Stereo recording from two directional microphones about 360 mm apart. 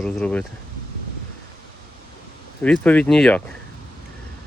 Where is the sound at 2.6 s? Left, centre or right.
Centre.